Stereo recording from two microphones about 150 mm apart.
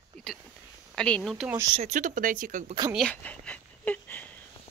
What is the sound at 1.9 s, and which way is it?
Speech, 60° right (ahead or behind).